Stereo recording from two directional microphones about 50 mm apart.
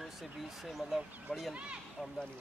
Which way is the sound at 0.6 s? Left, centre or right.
Centre.